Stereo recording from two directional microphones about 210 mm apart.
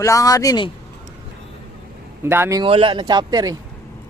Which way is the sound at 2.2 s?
10° right (ahead or behind).